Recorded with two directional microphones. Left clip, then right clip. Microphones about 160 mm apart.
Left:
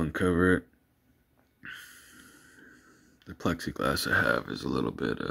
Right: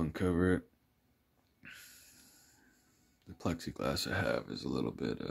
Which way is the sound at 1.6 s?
20° right (ahead or behind).